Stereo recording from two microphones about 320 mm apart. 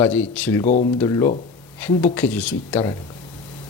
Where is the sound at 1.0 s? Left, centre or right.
Centre.